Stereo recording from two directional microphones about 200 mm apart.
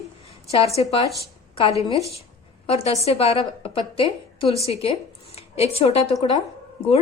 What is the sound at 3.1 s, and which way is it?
A woman's voice, 30° left (ahead or behind).